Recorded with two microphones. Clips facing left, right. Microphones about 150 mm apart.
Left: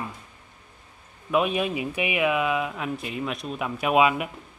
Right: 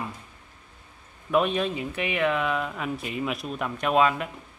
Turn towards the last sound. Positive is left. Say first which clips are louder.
# left 1 dB
turn(degrees=10)  # may be behind; listen again after turning